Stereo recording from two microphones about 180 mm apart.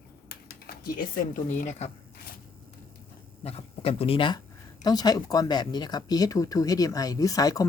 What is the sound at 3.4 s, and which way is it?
Speech, 35° left (ahead or behind).